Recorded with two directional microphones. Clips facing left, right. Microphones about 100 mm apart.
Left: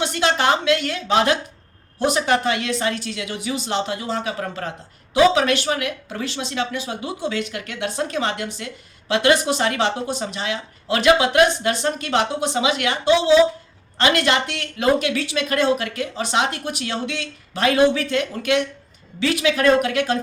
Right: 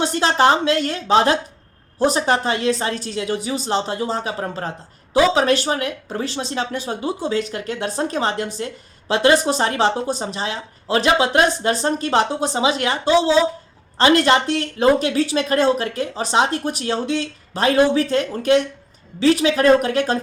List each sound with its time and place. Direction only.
0.0 s speech: 35° right (ahead or behind)